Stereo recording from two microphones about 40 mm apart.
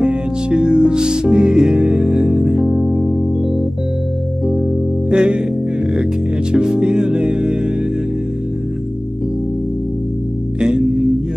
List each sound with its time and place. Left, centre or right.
0.0 s music: right
5.1 s music: right
6.5 s music: right